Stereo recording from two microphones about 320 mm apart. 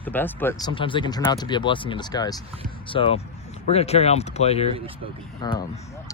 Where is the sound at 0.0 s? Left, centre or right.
Centre.